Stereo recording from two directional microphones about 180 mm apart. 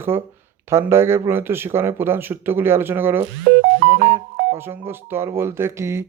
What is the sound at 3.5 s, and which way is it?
Music, 70° right (ahead or behind).